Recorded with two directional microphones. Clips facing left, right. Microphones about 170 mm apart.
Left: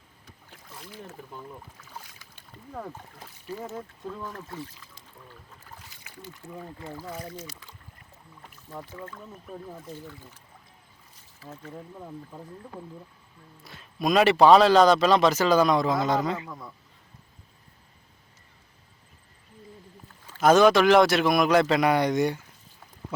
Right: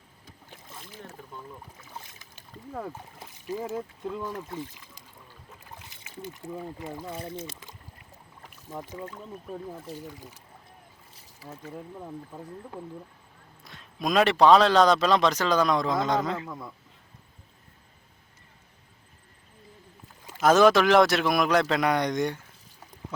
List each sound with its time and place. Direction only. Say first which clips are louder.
0.5 s boat: even; 20° right (ahead or behind)
2.0 s boat: even; 20° right (ahead or behind)
2.3 s speech: right 2 dB; 10° right (ahead or behind); by 7.5 s 25° right (ahead or behind)
8.7 s speech: right 2 dB; 15° right (ahead or behind)
11.3 s speech: right 1 dB; 10° right (ahead or behind)
20.4 s speech: left 1 dB; centre (ahead or behind)